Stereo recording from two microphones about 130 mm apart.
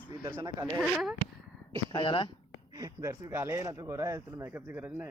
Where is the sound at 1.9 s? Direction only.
40° left (ahead or behind).